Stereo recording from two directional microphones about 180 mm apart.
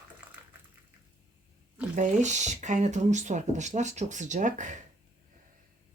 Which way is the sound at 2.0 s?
40° right (ahead or behind).